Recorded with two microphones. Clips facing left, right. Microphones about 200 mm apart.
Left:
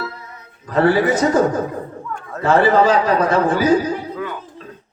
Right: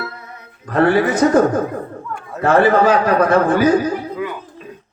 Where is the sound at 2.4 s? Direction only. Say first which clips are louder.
Right 1 dB; 55° right (ahead or behind).